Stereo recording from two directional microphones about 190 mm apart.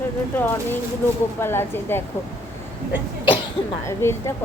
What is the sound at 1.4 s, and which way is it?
Speech, 10° left (ahead or behind).